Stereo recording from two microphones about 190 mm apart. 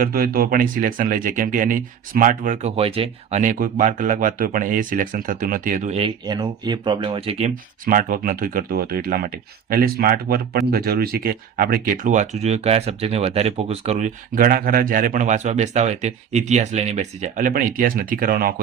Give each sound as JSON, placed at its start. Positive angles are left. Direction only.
{"t": 0.0, "sound": "speech", "side_deg": -50}
{"t": 6.2, "sound": "speech", "side_deg": -20}
{"t": 7.9, "sound": "speech", "side_deg": -45}